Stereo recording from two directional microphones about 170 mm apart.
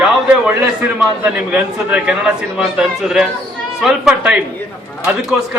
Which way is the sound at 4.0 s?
5° right (ahead or behind).